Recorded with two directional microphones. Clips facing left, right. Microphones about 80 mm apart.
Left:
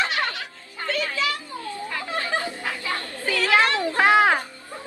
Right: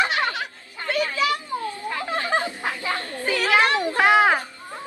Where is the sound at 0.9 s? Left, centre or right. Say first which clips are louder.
Right 3 dB; right.